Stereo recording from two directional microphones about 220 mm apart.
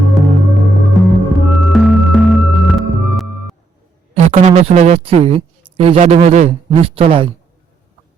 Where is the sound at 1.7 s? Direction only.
Centre (ahead or behind).